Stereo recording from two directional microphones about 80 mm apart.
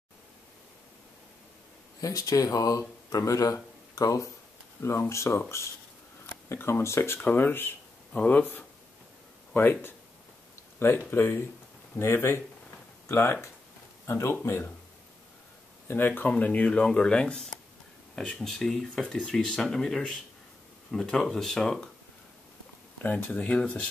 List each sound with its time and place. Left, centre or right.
2.0 s speech: left
4.8 s speech: left
6.5 s speech: left
7.2 s speech: left
8.1 s speech: centre
15.9 s speech: left; by 21.8 s centre
23.0 s speech: left